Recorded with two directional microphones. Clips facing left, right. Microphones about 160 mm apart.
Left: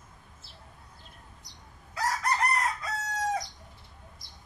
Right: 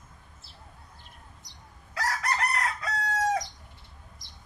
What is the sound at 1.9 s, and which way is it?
Chicken, 75° right (ahead or behind).